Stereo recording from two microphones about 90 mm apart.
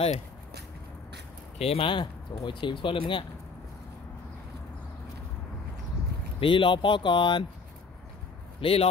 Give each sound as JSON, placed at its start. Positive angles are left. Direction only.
{"t": 1.6, "sound": "speech", "side_deg": 80}
{"t": 6.4, "sound": "speech", "side_deg": 65}
{"t": 8.5, "sound": "speech", "side_deg": 90}